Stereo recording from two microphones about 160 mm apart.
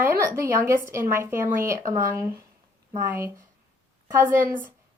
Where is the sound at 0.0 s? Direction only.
15° right (ahead or behind).